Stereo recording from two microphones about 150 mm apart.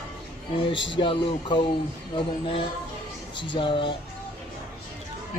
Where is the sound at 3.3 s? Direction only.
35° left (ahead or behind).